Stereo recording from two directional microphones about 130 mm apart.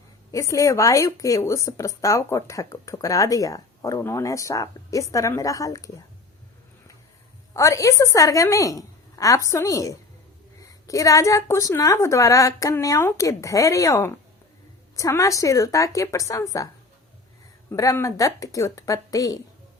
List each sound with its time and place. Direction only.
0.3 s speech: 25° left (ahead or behind)
7.5 s speech: 25° left (ahead or behind)
17.7 s speech: 25° left (ahead or behind)